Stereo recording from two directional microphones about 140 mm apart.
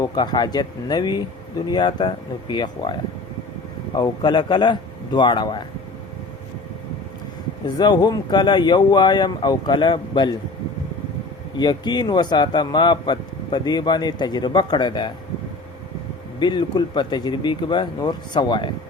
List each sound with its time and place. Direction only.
0.0 s speech: 30° left (ahead or behind)
7.8 s speech: 30° left (ahead or behind)
11.5 s speech: 30° left (ahead or behind)
16.4 s speech: 30° left (ahead or behind)